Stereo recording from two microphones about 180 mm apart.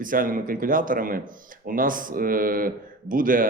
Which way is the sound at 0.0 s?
50° right (ahead or behind).